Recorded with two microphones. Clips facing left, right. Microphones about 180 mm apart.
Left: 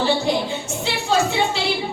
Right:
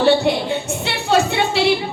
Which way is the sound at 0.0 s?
65° right (ahead or behind).